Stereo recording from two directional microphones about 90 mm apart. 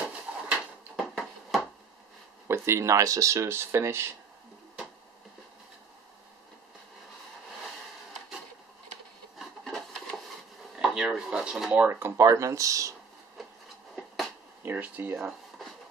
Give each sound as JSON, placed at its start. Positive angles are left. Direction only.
{"t": 0.5, "sound": "a sound", "side_deg": 0}
{"t": 2.4, "sound": "speech", "side_deg": -30}
{"t": 9.4, "sound": "wood", "side_deg": 0}
{"t": 10.8, "sound": "speech", "side_deg": -5}
{"t": 11.8, "sound": "speech", "side_deg": -25}
{"t": 12.2, "sound": "speech", "side_deg": -35}
{"t": 13.9, "sound": "finger snapping", "side_deg": 0}
{"t": 14.6, "sound": "speech", "side_deg": -20}